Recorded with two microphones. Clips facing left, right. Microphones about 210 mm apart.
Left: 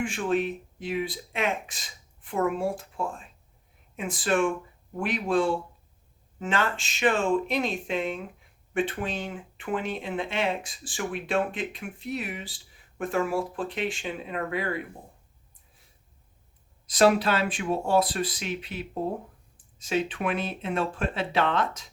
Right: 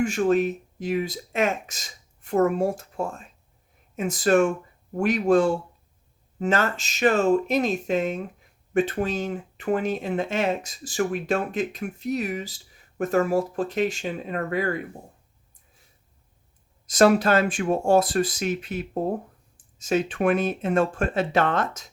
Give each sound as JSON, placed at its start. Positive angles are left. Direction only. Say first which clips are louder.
{"t": 0.0, "sound": "speech", "louder": "right 6 dB", "side_deg": -40}
{"t": 16.8, "sound": "speech", "louder": "right 3 dB", "side_deg": -45}